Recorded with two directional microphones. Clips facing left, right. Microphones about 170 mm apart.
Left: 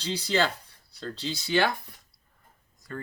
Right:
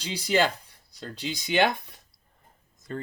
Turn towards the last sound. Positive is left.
turn(degrees=-20)  # may be behind; listen again after turning